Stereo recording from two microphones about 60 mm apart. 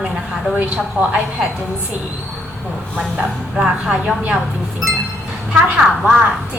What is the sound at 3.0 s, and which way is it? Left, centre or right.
A woman's voice, centre.